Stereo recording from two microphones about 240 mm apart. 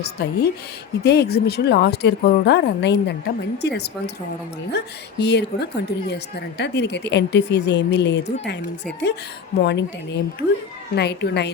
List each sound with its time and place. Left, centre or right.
0.0 s speech: left
9.6 s speech: left
10.9 s speech: left